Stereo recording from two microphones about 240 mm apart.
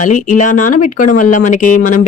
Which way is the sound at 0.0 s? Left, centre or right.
Left.